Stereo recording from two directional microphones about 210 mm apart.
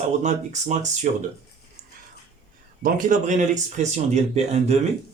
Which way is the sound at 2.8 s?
40° right (ahead or behind).